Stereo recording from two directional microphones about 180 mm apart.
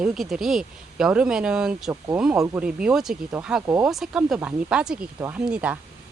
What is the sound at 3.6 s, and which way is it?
Speech, 15° right (ahead or behind).